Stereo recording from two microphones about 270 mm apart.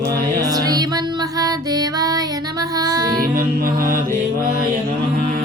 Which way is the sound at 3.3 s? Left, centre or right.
Right.